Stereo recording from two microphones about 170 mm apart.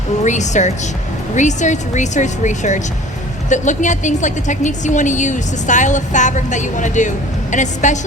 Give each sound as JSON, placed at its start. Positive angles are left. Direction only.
{"t": 0.3, "sound": "a woman's voice", "side_deg": 45}